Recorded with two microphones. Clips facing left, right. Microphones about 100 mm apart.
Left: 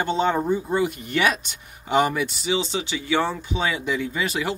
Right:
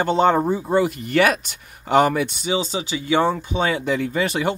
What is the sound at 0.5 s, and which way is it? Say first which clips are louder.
Speech: right 3 dB; 60° right (ahead or behind).